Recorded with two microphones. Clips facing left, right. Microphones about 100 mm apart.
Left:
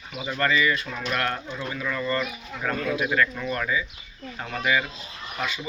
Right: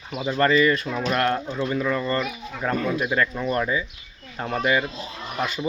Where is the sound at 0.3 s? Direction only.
35° right (ahead or behind).